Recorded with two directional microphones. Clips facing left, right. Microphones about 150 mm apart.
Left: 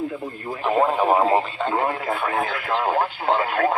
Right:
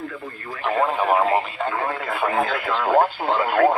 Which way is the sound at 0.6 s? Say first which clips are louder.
Left 2 dB; 5° left (ahead or behind).